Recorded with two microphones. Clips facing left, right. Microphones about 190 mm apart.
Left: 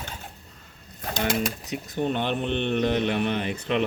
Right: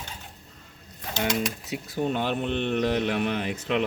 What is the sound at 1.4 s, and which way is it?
A man's voice, 10° right (ahead or behind).